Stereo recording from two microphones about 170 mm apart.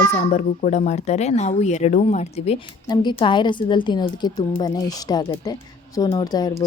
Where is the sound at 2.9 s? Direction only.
25° left (ahead or behind).